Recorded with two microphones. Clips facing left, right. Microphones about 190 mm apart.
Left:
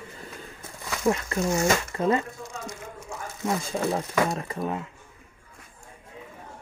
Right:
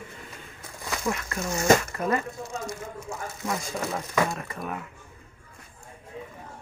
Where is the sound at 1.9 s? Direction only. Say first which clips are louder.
Left 3 dB; 25° left (ahead or behind).